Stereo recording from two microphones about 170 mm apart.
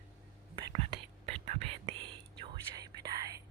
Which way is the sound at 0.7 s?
40° right (ahead or behind).